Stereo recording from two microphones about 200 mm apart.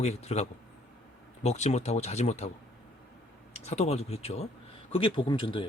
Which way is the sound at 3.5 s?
30° left (ahead or behind).